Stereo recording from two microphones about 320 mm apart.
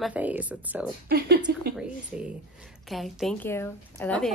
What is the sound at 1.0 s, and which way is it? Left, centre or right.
Speech, right.